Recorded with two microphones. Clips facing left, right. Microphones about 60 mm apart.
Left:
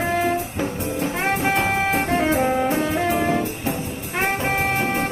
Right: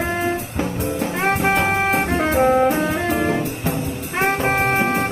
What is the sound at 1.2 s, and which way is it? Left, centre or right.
Brass instrument, right.